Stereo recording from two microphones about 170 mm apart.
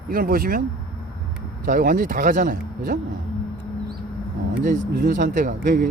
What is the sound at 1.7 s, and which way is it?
Speech, 55° right (ahead or behind).